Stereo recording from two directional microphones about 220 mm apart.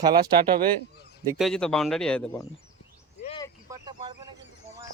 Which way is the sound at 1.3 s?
Centre (ahead or behind).